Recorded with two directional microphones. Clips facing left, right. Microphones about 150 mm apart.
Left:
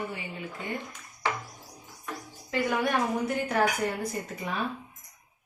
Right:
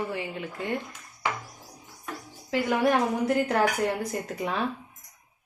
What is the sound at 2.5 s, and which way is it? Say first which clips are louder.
A woman's voice: right 4 dB; 90° right.